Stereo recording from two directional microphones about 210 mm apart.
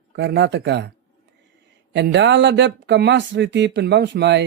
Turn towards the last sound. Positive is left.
turn(degrees=-55)  # may be behind; listen again after turning